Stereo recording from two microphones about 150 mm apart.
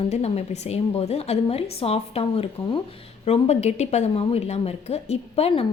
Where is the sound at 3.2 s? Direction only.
45° left (ahead or behind).